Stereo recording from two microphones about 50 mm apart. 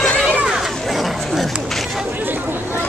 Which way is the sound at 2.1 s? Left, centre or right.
Right.